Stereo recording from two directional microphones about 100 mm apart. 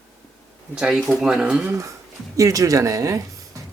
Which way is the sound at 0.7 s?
10° right (ahead or behind).